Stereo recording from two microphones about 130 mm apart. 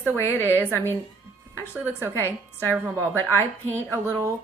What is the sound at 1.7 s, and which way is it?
Speech, 20° right (ahead or behind).